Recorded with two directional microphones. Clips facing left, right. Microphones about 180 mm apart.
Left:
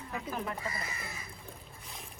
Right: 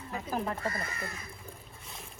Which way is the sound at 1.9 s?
Centre (ahead or behind).